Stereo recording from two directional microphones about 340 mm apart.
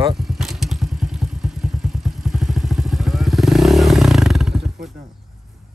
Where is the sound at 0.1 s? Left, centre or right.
Centre.